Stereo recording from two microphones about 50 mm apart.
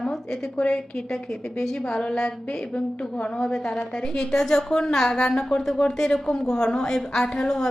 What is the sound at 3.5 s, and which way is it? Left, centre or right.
A woman's voice, centre.